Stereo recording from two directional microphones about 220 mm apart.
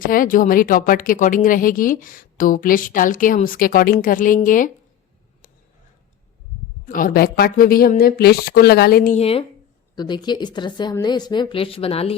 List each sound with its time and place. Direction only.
0.0 s speech: 40° left (ahead or behind)
6.8 s speech: 40° left (ahead or behind)
9.9 s a woman's voice: 20° left (ahead or behind)